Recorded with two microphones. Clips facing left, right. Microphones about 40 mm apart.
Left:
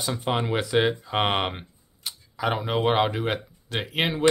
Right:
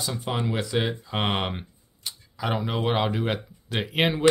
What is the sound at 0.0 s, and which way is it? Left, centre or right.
Speech, centre.